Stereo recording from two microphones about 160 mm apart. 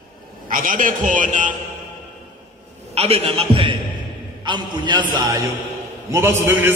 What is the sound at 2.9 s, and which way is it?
A man's voice, 40° right (ahead or behind).